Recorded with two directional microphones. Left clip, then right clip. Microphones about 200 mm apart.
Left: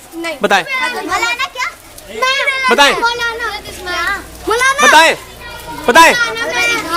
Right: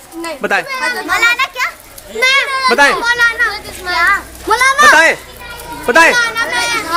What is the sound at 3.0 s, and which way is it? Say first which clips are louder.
Children playing: right 4 dB; 50° right (ahead or behind).